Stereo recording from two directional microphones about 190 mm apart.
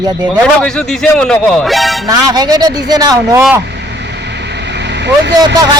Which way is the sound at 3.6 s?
65° right (ahead or behind).